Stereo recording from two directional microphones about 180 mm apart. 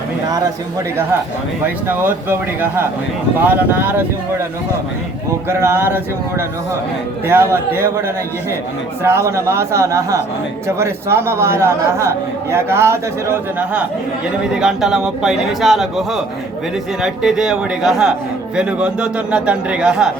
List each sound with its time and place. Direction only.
1.6 s a man's voice: 10° right (ahead or behind)
5.5 s a man's voice: 15° right (ahead or behind)
7.3 s a man's voice: 15° right (ahead or behind)
14.5 s a man's voice: 5° right (ahead or behind)